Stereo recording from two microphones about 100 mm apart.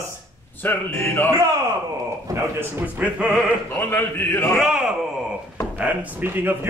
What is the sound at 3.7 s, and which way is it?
Speech, 20° left (ahead or behind).